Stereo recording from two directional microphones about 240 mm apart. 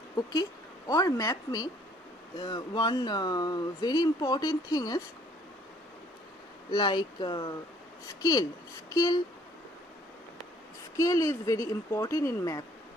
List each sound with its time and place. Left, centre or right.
0.9 s speech: centre
6.7 s speech: centre
10.9 s speech: centre